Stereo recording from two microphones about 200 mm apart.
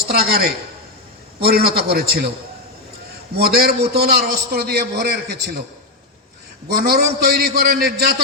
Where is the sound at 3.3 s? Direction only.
55° right (ahead or behind).